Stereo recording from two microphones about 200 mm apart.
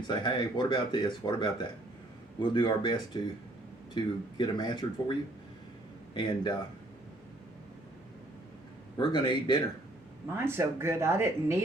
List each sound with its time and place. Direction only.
0.1 s speech: 20° left (ahead or behind)
6.1 s speech: 20° left (ahead or behind)
9.0 s speech: 20° left (ahead or behind)
10.3 s speech: 10° right (ahead or behind)